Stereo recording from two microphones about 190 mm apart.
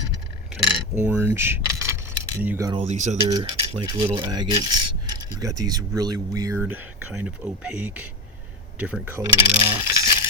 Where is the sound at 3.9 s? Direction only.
20° right (ahead or behind).